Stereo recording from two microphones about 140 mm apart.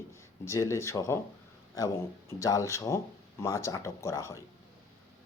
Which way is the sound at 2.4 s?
20° left (ahead or behind).